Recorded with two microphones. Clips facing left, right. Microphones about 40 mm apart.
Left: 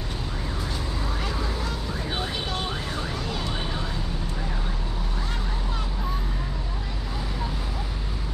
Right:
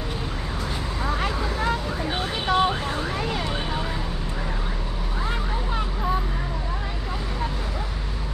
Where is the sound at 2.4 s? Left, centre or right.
Right.